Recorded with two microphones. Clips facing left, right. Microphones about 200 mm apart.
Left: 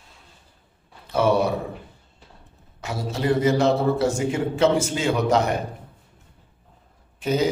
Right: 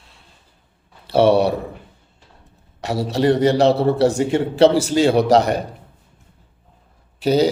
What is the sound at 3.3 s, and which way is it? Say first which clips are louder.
Speech: right 2 dB; 35° right (ahead or behind).